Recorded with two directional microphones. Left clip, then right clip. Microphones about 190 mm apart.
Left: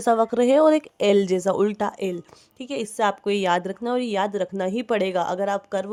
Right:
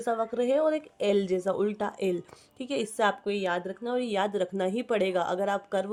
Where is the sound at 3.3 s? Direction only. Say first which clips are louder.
Left 8 dB; 40° left (ahead or behind).